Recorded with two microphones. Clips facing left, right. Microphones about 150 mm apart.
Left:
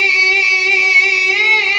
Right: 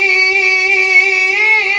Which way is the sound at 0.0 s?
50° right (ahead or behind).